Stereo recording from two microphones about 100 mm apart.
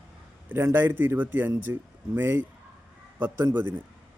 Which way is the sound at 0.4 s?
20° right (ahead or behind).